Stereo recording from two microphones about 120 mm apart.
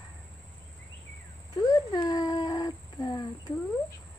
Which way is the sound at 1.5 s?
30° left (ahead or behind).